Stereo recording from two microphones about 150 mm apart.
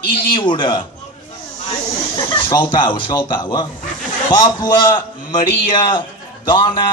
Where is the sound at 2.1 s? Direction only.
25° left (ahead or behind).